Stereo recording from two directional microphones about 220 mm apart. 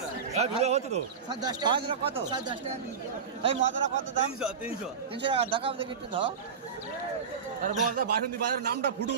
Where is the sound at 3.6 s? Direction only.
55° right (ahead or behind).